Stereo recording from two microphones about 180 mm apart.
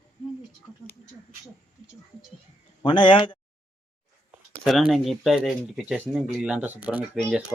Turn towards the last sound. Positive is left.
turn(degrees=-5)  # may be behind; listen again after turning